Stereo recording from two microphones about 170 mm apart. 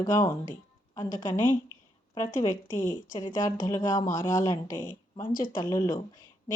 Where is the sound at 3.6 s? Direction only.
20° left (ahead or behind).